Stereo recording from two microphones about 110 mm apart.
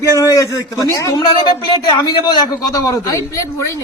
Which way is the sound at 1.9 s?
40° left (ahead or behind).